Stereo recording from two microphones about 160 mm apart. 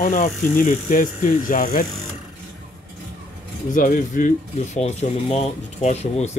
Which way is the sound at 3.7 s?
55° left (ahead or behind).